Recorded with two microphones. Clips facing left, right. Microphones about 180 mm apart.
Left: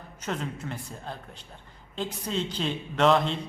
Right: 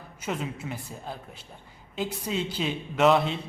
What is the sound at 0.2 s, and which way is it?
Speech, 5° right (ahead or behind).